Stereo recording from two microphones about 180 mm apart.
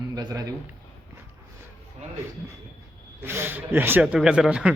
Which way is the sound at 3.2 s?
10° right (ahead or behind).